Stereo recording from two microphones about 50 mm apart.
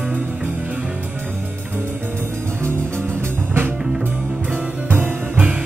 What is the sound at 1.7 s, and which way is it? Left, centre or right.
Music, right.